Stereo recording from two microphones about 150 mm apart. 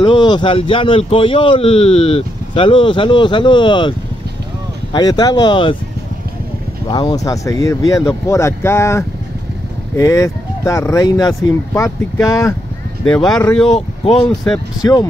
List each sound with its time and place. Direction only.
0.0 s speech: 30° left (ahead or behind)
4.9 s speech: 25° left (ahead or behind)
6.9 s speech: 30° left (ahead or behind)
13.0 s speech: 5° left (ahead or behind)
14.8 s speech: 25° left (ahead or behind)